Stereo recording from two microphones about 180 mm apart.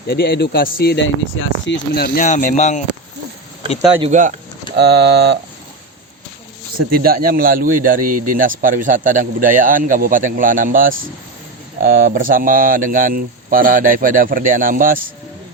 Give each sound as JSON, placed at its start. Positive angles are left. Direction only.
{"t": 0.1, "sound": "speech", "side_deg": 65}
{"t": 2.2, "sound": "speech", "side_deg": 45}
{"t": 4.1, "sound": "a man's voice", "side_deg": -45}
{"t": 4.8, "sound": "speech", "side_deg": -70}
{"t": 6.9, "sound": "a man's voice", "side_deg": -55}